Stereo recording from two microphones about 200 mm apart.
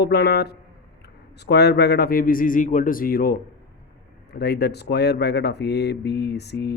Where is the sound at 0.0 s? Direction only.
55° left (ahead or behind).